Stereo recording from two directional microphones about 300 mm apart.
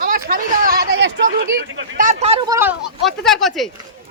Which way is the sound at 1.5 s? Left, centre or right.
Right.